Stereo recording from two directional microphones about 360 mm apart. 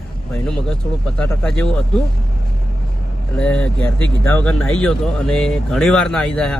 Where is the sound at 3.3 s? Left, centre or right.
Centre.